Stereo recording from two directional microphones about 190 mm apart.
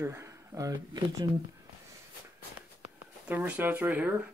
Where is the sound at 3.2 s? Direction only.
10° right (ahead or behind).